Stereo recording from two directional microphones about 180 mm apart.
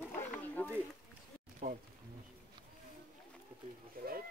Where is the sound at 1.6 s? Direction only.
45° right (ahead or behind).